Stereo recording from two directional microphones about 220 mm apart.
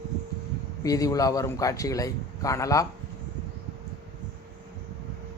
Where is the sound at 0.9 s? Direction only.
15° left (ahead or behind).